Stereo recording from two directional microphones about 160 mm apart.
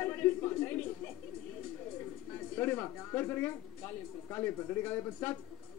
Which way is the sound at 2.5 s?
15° left (ahead or behind).